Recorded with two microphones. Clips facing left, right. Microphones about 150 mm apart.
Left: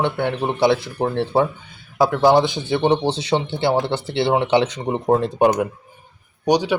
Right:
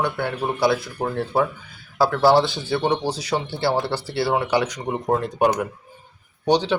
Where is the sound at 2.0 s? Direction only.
15° left (ahead or behind).